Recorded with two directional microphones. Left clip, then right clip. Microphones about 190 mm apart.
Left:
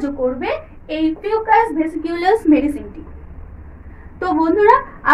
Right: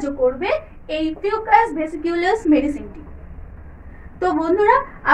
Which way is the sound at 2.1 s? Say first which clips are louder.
Left 3 dB; 15° left (ahead or behind).